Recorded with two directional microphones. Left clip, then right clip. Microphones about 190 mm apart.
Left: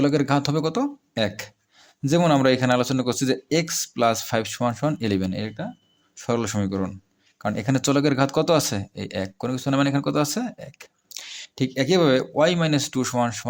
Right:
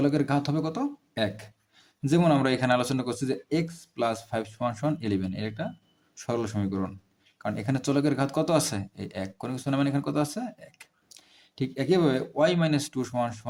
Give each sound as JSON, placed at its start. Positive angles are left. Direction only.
{"t": 0.0, "sound": "speech", "side_deg": 30}